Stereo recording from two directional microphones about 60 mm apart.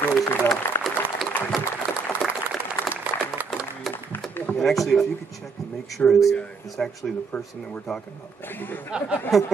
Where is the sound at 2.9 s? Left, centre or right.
Right.